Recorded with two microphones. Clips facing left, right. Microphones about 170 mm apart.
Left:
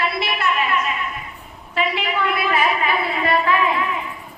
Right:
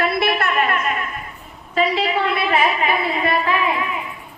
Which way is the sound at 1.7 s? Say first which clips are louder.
Right 4 dB; 35° right (ahead or behind).